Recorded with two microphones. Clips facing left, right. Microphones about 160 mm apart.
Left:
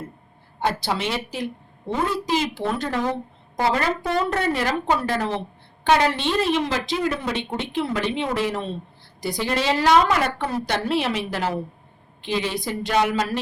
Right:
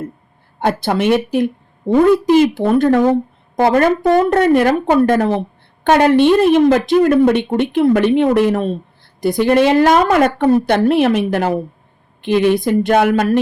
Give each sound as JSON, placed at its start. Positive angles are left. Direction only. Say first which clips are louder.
{"t": 0.6, "sound": "a woman's voice", "louder": "right 8 dB", "side_deg": -55}